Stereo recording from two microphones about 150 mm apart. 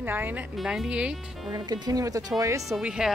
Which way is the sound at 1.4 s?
30° right (ahead or behind).